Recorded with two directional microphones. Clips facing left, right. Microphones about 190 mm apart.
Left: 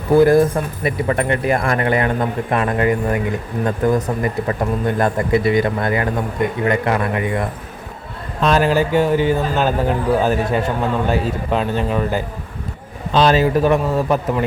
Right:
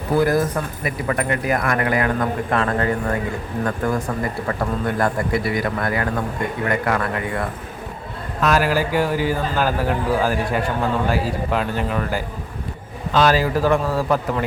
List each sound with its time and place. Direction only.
0.2 s speech: 25° left (ahead or behind)